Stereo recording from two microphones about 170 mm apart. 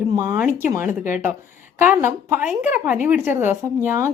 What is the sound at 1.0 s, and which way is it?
Speech, 50° left (ahead or behind).